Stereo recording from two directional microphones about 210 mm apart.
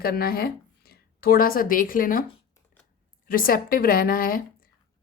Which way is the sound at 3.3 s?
45° left (ahead or behind).